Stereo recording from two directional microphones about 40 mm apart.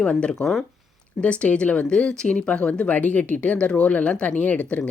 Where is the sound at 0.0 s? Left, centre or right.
Left.